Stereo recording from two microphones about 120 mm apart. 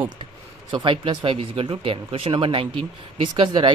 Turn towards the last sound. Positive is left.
turn(degrees=-45)  # may be behind; listen again after turning